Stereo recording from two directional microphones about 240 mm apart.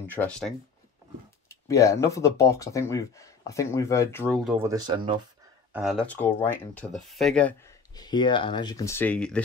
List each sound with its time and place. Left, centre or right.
0.0 s speech: centre
1.5 s speech: centre
4.5 s speech: centre
5.7 s speech: centre